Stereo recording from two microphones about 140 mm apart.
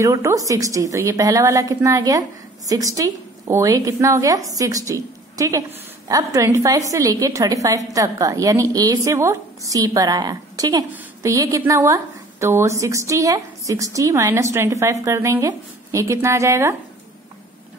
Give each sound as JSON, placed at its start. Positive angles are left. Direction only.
{"t": 0.0, "sound": "a woman's voice", "side_deg": -20}